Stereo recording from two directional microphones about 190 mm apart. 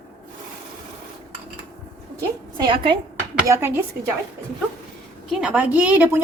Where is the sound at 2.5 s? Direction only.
25° right (ahead or behind).